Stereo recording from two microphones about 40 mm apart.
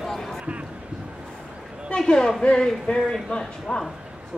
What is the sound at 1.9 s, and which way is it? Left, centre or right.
A woman's voice, centre.